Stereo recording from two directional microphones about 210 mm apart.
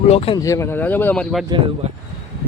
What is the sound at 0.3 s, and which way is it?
Speech, 15° left (ahead or behind).